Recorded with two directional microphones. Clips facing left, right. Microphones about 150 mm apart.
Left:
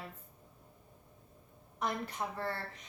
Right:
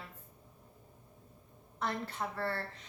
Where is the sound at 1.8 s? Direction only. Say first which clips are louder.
Even; 15° left (ahead or behind).